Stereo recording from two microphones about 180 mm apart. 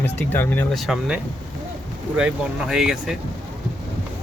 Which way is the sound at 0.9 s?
5° right (ahead or behind).